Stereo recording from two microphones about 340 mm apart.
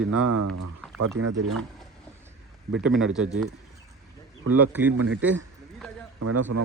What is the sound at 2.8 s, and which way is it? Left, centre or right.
Speech, centre.